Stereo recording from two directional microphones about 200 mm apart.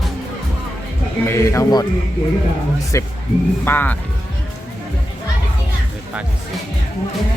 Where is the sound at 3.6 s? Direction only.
10° left (ahead or behind).